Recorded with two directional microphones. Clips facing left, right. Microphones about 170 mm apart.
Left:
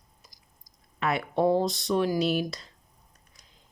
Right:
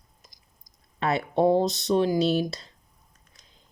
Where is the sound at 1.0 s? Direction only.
25° right (ahead or behind).